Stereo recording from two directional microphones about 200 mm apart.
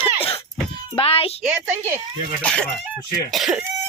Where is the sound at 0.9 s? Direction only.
30° left (ahead or behind).